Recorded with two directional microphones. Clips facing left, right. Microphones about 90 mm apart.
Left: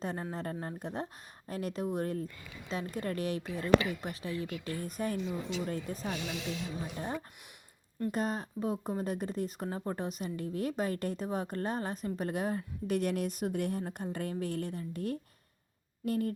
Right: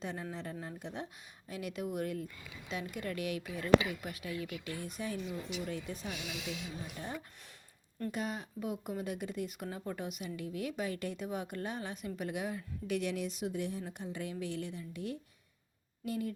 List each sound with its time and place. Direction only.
0.0 s speech: 40° left (ahead or behind)
2.2 s a woman's voice: 5° right (ahead or behind)
2.9 s speech: 35° left (ahead or behind)
4.8 s speech: 45° left (ahead or behind)
5.1 s speech: 25° left (ahead or behind)
5.6 s speech: 40° left (ahead or behind)
6.1 s a woman's voice: 5° right (ahead or behind)
6.8 s speech: 35° left (ahead or behind)